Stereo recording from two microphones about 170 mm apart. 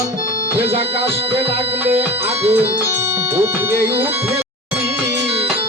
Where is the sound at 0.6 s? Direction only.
35° right (ahead or behind).